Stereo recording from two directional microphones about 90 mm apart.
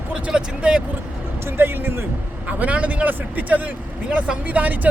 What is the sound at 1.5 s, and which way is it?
A man's voice, 25° right (ahead or behind).